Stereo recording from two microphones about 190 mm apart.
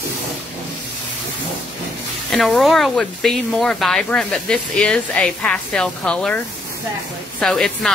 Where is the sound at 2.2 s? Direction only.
Centre (ahead or behind).